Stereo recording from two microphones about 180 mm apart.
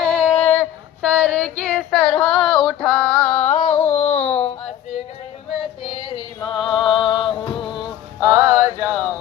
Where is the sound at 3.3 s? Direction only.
40° left (ahead or behind).